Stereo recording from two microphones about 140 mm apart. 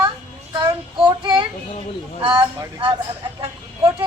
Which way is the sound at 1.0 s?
35° right (ahead or behind).